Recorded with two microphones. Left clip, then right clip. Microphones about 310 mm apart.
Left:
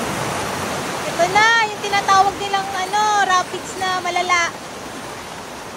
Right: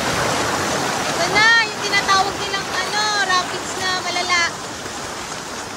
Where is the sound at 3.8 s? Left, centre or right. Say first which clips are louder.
Left 2 dB; centre.